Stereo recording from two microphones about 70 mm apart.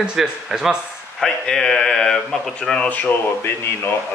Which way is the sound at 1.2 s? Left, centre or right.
Centre.